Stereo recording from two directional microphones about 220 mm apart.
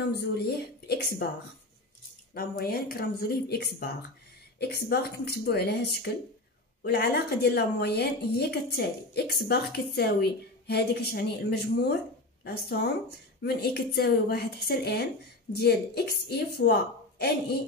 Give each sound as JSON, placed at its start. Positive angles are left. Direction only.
{"t": 0.6, "sound": "a woman's voice", "side_deg": 45}
{"t": 2.3, "sound": "a woman's voice", "side_deg": 45}